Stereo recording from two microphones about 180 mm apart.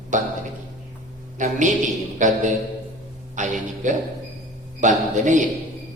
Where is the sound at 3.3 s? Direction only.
45° right (ahead or behind).